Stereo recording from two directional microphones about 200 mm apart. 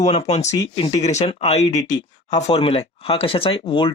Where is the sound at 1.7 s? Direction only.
20° left (ahead or behind).